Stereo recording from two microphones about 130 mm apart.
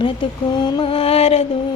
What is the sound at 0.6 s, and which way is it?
Female singing, 35° left (ahead or behind).